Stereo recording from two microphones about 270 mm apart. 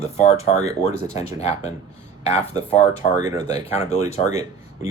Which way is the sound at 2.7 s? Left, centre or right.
Left.